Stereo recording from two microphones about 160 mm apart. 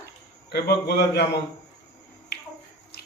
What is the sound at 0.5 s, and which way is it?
Speech, 75° left (ahead or behind).